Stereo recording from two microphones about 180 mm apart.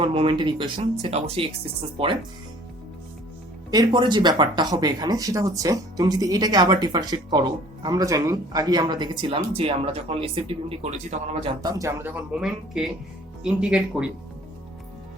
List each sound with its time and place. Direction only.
0.0 s speech: 30° right (ahead or behind)
3.7 s speech: 25° right (ahead or behind)
11.4 s speech: 20° right (ahead or behind); by 14.1 s 5° right (ahead or behind)